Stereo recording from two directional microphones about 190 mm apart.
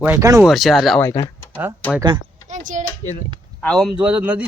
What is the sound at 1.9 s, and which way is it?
Speech, 20° right (ahead or behind).